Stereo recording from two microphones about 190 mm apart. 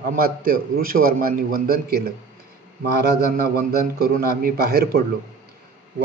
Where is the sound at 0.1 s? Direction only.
45° right (ahead or behind).